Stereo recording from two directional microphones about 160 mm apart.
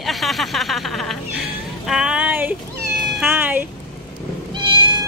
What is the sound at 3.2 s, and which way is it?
Cat, 10° right (ahead or behind).